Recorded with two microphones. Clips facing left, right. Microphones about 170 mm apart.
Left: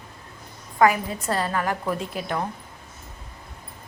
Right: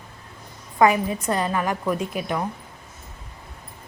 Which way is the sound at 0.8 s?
20° right (ahead or behind).